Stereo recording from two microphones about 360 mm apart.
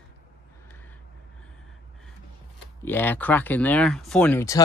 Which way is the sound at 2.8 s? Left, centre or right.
Centre.